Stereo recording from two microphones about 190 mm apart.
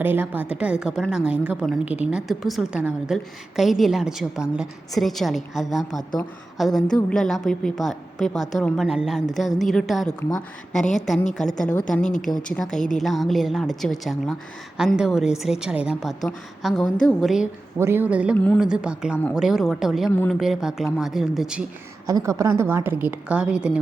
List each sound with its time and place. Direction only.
0.0 s a woman's voice: 10° right (ahead or behind)
12.0 s speech: 40° left (ahead or behind)
13.0 s a woman's voice: centre (ahead or behind)
17.7 s a woman's voice: 10° right (ahead or behind)
18.3 s speech: 10° left (ahead or behind)
18.6 s a woman's voice: 5° right (ahead or behind)
20.1 s speech: 10° left (ahead or behind)
20.4 s a woman's voice: centre (ahead or behind)
22.0 s a woman's voice: 15° right (ahead or behind)